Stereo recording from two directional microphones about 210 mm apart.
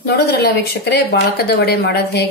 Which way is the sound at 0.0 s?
50° left (ahead or behind).